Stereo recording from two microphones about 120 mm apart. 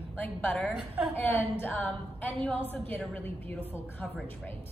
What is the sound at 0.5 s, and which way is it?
Speech, centre (ahead or behind).